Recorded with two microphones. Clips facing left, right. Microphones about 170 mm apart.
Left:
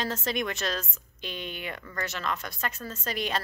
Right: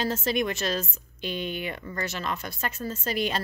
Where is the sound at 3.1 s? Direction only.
Centre (ahead or behind).